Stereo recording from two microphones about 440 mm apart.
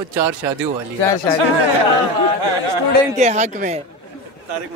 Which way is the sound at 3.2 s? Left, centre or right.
Centre.